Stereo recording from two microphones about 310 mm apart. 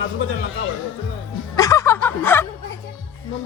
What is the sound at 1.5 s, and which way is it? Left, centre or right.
Snicker, centre.